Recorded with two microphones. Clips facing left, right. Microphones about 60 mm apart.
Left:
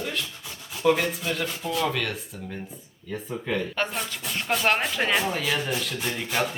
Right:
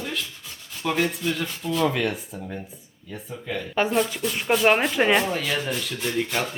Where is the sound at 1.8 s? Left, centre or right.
Centre.